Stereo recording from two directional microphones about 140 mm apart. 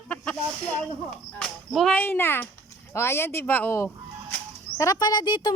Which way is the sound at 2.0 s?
15° left (ahead or behind).